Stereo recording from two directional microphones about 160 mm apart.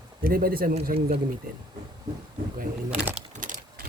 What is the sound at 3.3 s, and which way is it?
Keys jangling, 55° right (ahead or behind).